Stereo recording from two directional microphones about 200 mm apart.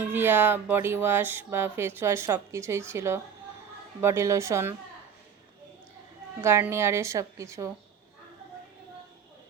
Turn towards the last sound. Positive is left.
turn(degrees=-15)  # may be behind; listen again after turning